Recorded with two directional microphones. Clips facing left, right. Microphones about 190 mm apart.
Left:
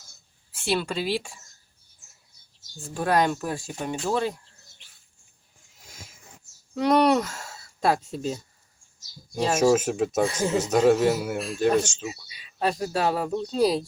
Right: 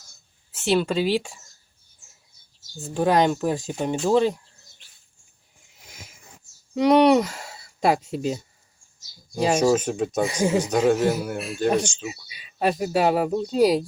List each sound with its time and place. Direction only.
0.5 s speech: 20° right (ahead or behind)
2.8 s speech: 20° right (ahead or behind)
6.7 s speech: 15° right (ahead or behind)
9.6 s a man's voice: 5° left (ahead or behind)
10.2 s speech: 15° right (ahead or behind)
10.6 s a man's voice: 5° left (ahead or behind)
11.8 s a man's voice: 5° left (ahead or behind)
12.0 s speech: 15° right (ahead or behind)